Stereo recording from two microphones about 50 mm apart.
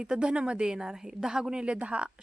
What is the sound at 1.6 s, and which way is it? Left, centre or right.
Speech, right.